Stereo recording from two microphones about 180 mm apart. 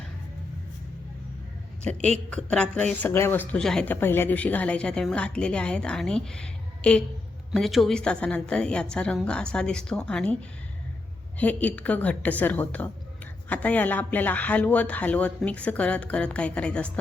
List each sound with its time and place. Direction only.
1.8 s a man's voice: 5° left (ahead or behind)
11.3 s a man's voice: 10° left (ahead or behind)